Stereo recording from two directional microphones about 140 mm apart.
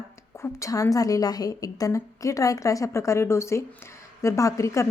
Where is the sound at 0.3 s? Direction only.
20° left (ahead or behind).